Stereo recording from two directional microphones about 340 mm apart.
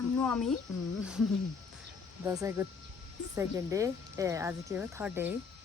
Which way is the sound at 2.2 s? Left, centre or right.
Centre.